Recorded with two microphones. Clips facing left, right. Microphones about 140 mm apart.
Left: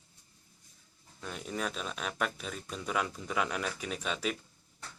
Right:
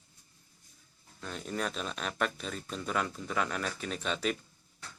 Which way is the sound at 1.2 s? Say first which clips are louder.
Right 1 dB; 10° left (ahead or behind).